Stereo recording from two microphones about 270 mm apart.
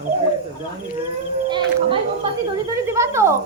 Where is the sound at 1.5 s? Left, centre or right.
Centre.